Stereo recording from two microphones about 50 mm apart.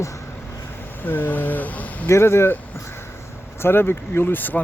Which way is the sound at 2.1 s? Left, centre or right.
Left.